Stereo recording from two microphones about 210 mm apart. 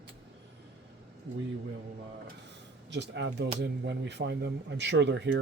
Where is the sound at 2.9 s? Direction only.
55° right (ahead or behind).